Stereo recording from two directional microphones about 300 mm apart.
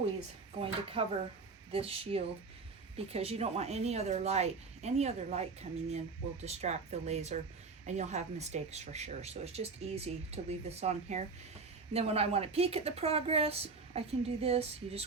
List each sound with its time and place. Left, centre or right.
0.6 s speech: centre